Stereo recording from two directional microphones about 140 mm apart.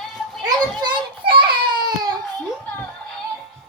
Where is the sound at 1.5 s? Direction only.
30° right (ahead or behind).